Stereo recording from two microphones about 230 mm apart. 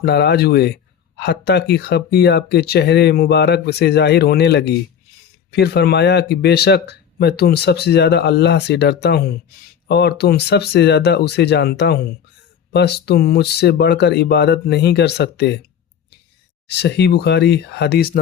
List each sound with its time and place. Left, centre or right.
0.0 s speech: left
16.6 s speech: left